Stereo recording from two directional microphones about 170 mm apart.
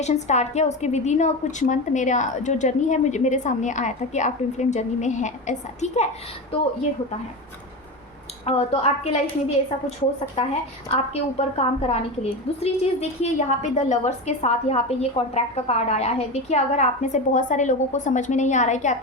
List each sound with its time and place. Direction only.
0.0 s a woman's voice: 40° left (ahead or behind)
6.5 s a woman's voice: 35° left (ahead or behind)
8.4 s a woman's voice: 35° left (ahead or behind)
10.9 s a woman's voice: 40° left (ahead or behind)